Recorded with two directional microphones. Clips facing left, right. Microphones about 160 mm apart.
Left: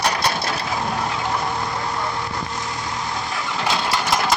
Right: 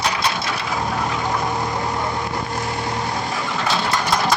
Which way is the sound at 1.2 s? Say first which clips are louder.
Right 2 dB; 10° right (ahead or behind).